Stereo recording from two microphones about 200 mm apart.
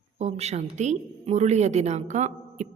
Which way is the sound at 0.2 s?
30° right (ahead or behind).